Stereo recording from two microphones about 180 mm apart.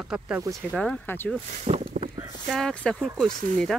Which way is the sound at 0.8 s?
10° left (ahead or behind).